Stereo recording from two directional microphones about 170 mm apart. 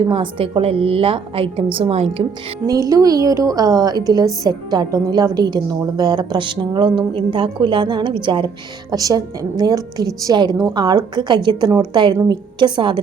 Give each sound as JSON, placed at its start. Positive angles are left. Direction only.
{"t": 0.1, "sound": "a woman's voice", "side_deg": -30}
{"t": 2.9, "sound": "a woman's voice", "side_deg": -20}